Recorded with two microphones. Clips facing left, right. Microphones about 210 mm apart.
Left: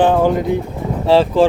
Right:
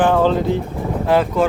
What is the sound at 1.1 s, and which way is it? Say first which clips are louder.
Speech: left 5 dB; 30° left (ahead or behind).